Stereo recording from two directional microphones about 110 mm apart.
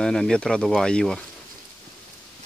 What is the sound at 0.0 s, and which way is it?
Speech, 5° left (ahead or behind).